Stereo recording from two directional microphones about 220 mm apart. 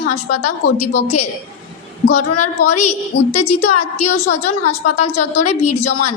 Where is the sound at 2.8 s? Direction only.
30° left (ahead or behind).